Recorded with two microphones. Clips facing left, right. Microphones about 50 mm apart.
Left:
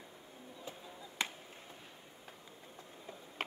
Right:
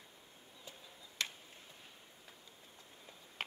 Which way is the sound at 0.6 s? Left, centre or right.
Left.